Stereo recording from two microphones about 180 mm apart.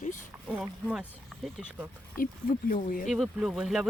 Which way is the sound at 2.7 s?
50° left (ahead or behind).